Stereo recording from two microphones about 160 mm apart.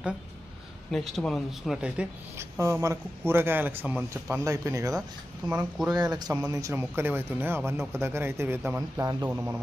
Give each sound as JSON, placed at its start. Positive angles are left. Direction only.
{"t": 0.9, "sound": "speech", "side_deg": 0}
{"t": 5.5, "sound": "speech", "side_deg": -10}
{"t": 6.1, "sound": "speech", "side_deg": -25}